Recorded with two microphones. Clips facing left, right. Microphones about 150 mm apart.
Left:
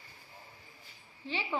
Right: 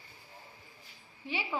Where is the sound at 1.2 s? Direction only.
15° right (ahead or behind).